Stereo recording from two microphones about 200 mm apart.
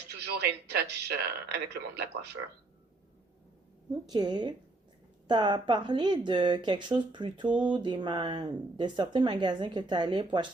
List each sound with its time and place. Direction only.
0.3 s speech: 55° right (ahead or behind)
4.0 s speech: 20° right (ahead or behind)
7.4 s speech: 5° right (ahead or behind)
7.7 s speech: 25° right (ahead or behind)